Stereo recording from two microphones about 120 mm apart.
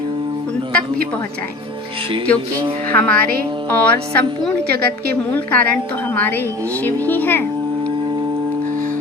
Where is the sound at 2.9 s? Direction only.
15° left (ahead or behind).